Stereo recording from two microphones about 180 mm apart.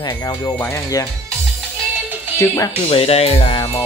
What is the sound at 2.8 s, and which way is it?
Speech, 35° left (ahead or behind).